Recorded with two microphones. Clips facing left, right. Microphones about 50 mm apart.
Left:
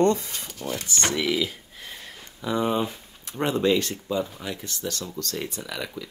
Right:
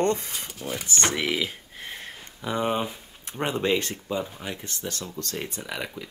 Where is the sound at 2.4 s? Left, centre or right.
Centre.